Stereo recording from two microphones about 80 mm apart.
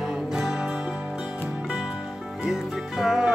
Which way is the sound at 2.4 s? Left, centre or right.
Centre.